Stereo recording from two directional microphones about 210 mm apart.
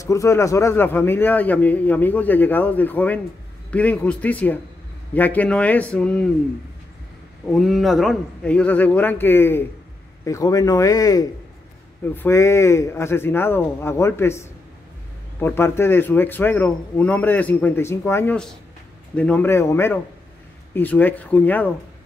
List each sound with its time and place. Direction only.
0.0 s a man's voice: 15° left (ahead or behind)
7.5 s a man's voice: centre (ahead or behind)